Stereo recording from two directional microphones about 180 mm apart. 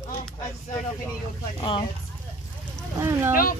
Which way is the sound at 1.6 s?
30° left (ahead or behind).